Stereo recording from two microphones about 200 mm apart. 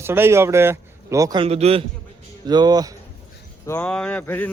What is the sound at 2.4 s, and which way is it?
Speech, 20° right (ahead or behind).